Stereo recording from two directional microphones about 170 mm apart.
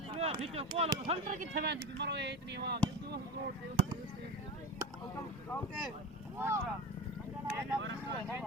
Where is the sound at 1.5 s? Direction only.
80° right.